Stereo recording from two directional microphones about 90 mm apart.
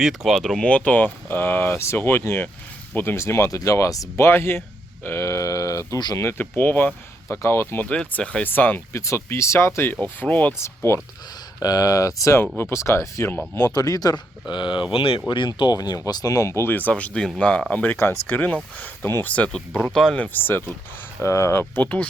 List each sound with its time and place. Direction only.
0.0 s speech: centre (ahead or behind); by 4.3 s 40° left (ahead or behind)
4.3 s speech: 25° left (ahead or behind)
5.0 s sheep: 30° left (ahead or behind)
6.1 s speech: 25° left (ahead or behind)
7.9 s speech: 10° left (ahead or behind)
9.0 s speech: 35° left (ahead or behind); by 10.5 s 20° left (ahead or behind)
10.6 s speech: 30° left (ahead or behind)
11.6 s speech: 45° left (ahead or behind)
13.7 s speech: 45° left (ahead or behind); by 14.8 s 60° left (ahead or behind)
14.9 s speech: 90° left
15.3 s speech: 60° left (ahead or behind); by 20.2 s 5° left (ahead or behind)
20.2 s speech: 20° left (ahead or behind)